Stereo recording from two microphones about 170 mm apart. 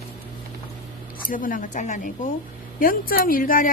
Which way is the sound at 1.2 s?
50° left (ahead or behind).